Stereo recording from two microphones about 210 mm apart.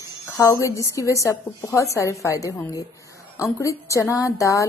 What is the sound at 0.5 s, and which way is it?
Speech, 15° left (ahead or behind).